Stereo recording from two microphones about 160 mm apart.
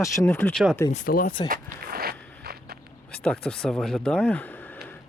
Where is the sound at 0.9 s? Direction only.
60° left (ahead or behind).